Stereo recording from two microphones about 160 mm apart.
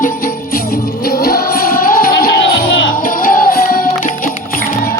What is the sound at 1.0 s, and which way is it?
Music, 75° left (ahead or behind).